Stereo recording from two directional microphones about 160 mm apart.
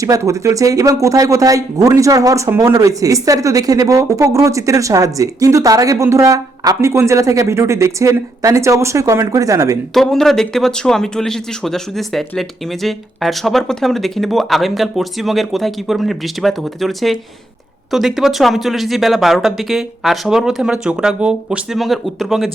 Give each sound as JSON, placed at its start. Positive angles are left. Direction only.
{"t": 0.0, "sound": "speech", "side_deg": -20}
{"t": 9.9, "sound": "speech", "side_deg": 0}